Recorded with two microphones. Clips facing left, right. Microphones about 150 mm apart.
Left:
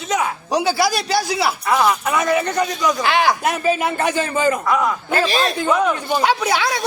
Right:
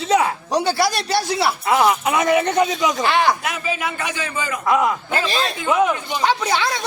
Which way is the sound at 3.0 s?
Centre (ahead or behind).